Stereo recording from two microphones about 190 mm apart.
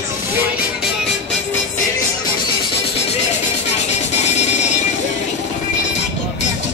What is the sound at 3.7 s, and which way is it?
Music, 35° left (ahead or behind).